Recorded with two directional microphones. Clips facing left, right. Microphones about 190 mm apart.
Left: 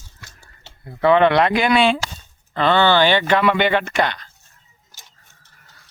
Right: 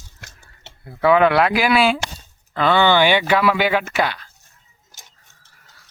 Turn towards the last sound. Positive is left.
turn(degrees=-5)  # may be behind; listen again after turning